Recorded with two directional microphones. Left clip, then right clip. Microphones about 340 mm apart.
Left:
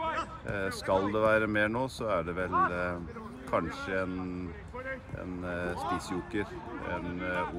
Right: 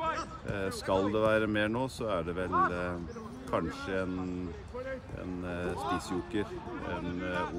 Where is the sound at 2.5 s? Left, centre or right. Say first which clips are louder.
Even; left.